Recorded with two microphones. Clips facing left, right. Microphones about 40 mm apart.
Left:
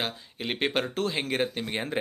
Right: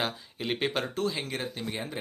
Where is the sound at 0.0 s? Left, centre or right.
Centre.